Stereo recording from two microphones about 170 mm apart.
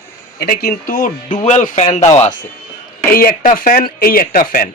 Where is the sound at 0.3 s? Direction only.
65° left (ahead or behind); by 2.1 s 45° left (ahead or behind).